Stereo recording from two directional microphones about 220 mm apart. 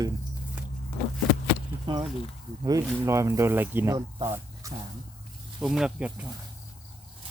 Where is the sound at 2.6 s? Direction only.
15° right (ahead or behind).